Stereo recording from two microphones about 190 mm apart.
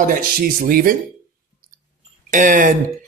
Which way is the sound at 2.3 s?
45° right (ahead or behind).